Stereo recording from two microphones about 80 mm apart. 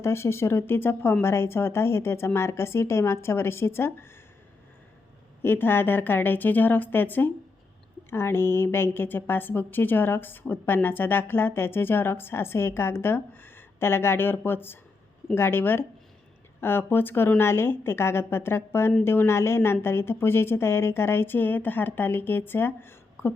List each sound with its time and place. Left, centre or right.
0.0 s speech: left
5.4 s a woman's voice: left